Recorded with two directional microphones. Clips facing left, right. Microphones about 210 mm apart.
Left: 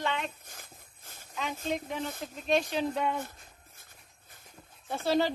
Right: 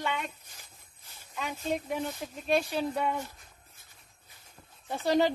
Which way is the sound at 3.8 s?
50° left (ahead or behind).